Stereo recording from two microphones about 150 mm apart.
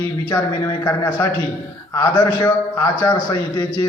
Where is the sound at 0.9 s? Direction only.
20° left (ahead or behind).